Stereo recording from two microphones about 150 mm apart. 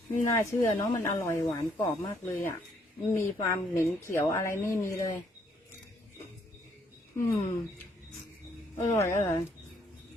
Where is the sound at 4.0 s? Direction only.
15° left (ahead or behind).